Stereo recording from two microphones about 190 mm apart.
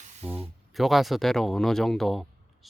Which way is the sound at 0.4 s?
Centre (ahead or behind).